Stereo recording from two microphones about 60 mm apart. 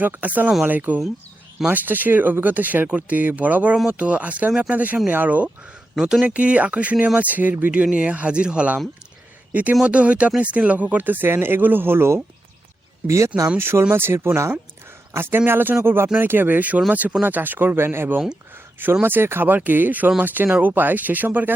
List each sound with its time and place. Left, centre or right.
0.0 s speech: right
6.0 s speech: centre
6.2 s speech: right
13.1 s speech: right
13.6 s speech: right